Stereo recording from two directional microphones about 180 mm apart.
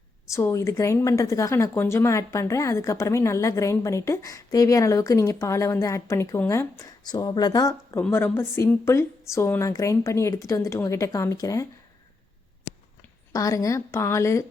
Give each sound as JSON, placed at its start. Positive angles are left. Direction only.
{"t": 0.3, "sound": "a woman's voice", "side_deg": 15}
{"t": 13.3, "sound": "a woman's voice", "side_deg": 20}